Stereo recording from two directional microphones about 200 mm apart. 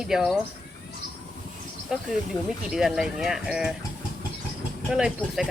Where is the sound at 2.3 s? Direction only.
20° left (ahead or behind).